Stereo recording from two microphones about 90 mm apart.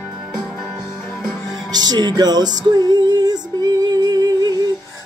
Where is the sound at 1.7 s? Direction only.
50° right (ahead or behind).